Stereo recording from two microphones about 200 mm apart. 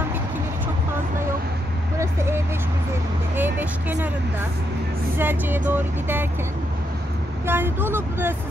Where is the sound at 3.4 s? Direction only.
10° right (ahead or behind).